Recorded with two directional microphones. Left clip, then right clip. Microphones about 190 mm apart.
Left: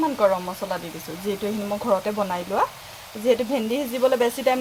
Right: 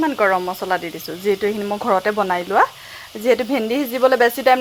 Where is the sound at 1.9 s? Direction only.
40° right (ahead or behind).